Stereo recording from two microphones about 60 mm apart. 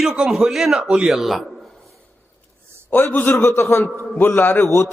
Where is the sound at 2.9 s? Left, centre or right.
Left.